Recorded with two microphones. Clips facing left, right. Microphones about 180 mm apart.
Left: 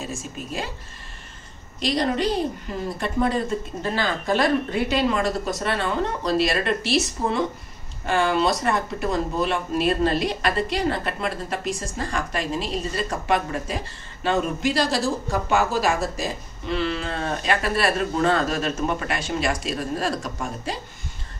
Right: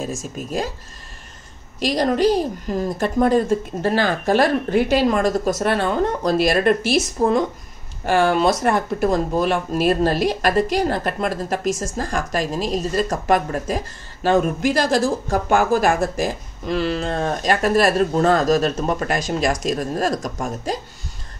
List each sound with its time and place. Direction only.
0.2 s a woman's voice: 45° right (ahead or behind)
1.9 s a woman's voice: 45° right (ahead or behind)
3.8 s a woman's voice: 60° right (ahead or behind)
16.6 s speech: 40° right (ahead or behind)